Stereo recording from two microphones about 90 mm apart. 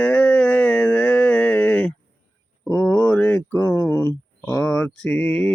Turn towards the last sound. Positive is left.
turn(degrees=15)  # may be behind; listen again after turning